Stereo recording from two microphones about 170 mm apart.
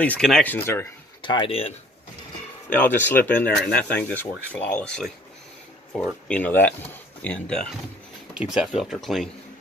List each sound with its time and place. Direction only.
0.0 s speech: 5° left (ahead or behind)
1.2 s speech: 30° left (ahead or behind)
2.7 s speech: 10° left (ahead or behind)
6.2 s speech: 10° left (ahead or behind)